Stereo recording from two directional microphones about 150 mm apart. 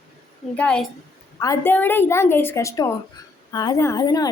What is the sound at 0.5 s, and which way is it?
Speech, 5° left (ahead or behind).